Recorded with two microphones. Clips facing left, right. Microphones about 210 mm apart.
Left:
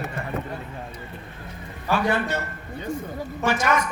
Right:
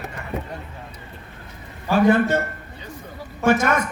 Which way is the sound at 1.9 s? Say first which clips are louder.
Right 7 dB; 50° right (ahead or behind).